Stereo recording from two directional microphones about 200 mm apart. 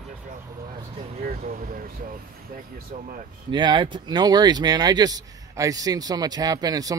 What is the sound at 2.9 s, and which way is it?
Speech, 40° right (ahead or behind).